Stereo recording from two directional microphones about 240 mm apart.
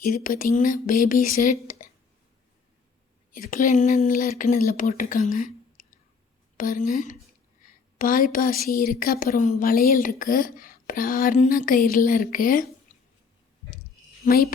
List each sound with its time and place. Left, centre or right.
0.0 s a woman's voice: left
3.5 s a woman's voice: left
14.3 s a woman's voice: left